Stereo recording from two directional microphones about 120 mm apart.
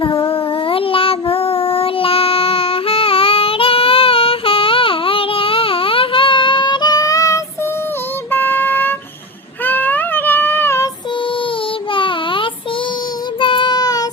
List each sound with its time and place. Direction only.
0.0 s child singing: 50° left (ahead or behind); by 7.4 s 25° left (ahead or behind)
8.3 s a sound: 15° left (ahead or behind)
9.6 s child singing: 15° left (ahead or behind)
11.9 s child singing: 45° left (ahead or behind)